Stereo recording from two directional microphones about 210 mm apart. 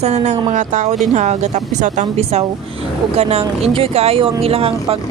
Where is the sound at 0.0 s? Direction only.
35° right (ahead or behind).